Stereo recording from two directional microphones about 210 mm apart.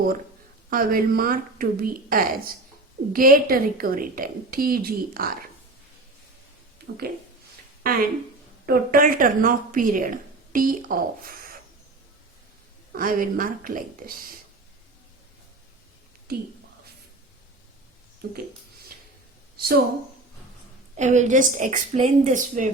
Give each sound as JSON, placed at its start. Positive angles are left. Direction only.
{"t": 0.7, "sound": "a woman's voice", "side_deg": -40}
{"t": 7.8, "sound": "speech", "side_deg": -45}
{"t": 12.9, "sound": "a woman's voice", "side_deg": -40}
{"t": 19.5, "sound": "speech", "side_deg": -45}
{"t": 20.9, "sound": "a woman's voice", "side_deg": -35}